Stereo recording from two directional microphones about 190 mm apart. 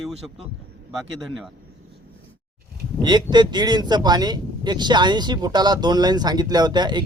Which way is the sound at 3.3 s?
20° right (ahead or behind).